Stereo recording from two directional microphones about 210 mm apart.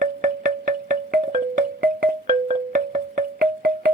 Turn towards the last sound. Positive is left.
turn(degrees=-45)  # may be behind; listen again after turning